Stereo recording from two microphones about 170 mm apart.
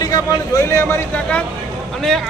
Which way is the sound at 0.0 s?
20° left (ahead or behind).